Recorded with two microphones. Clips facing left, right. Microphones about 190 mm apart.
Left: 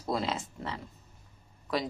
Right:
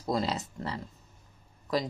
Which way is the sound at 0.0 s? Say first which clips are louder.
Right 2 dB; 5° left (ahead or behind).